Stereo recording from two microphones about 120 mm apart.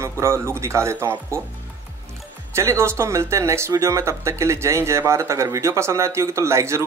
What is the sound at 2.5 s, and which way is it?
Speech, 25° right (ahead or behind).